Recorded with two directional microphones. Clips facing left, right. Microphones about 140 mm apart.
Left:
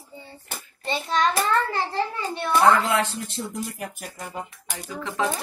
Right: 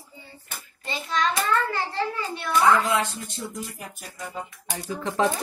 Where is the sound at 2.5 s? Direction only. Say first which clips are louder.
Left 1 dB; 60° left (ahead or behind).